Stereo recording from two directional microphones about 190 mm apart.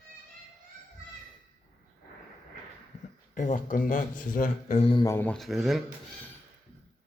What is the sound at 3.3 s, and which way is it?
Speech, 45° left (ahead or behind).